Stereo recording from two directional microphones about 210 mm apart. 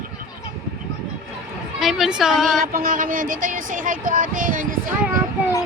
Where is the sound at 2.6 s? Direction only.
40° right (ahead or behind).